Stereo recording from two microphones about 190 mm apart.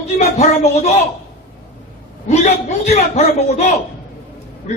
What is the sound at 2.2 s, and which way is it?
A man's voice, 35° left (ahead or behind).